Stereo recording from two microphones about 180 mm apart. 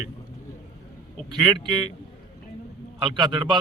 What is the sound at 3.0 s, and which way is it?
Speech, 25° right (ahead or behind).